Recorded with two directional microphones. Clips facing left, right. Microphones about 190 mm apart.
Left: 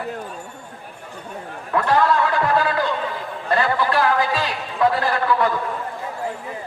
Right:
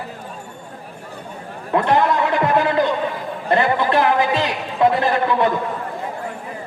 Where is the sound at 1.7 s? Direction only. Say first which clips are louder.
Right 1 dB; 20° right (ahead or behind).